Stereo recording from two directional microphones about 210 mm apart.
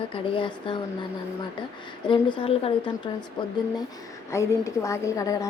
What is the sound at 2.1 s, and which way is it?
Speech, 25° left (ahead or behind).